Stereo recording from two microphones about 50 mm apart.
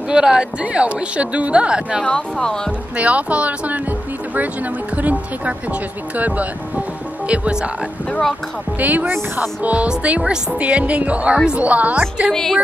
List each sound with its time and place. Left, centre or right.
0.1 s speech: centre
2.0 s speech: centre
3.0 s speech: right
4.9 s speech: right
8.7 s speech: right
11.3 s speech: centre
11.6 s speech: right